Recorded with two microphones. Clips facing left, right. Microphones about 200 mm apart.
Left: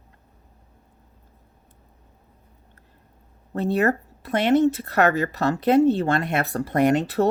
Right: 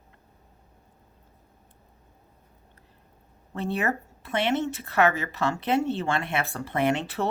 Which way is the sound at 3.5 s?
40° left (ahead or behind).